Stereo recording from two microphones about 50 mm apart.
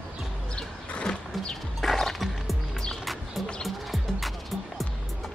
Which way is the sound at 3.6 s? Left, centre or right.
Centre.